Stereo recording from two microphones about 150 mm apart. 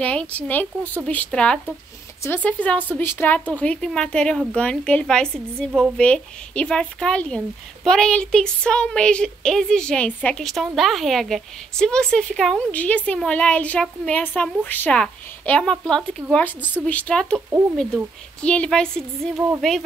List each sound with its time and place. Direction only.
0.0 s speech: 10° left (ahead or behind)
17.5 s speech: 15° right (ahead or behind)
17.7 s speech: 5° left (ahead or behind)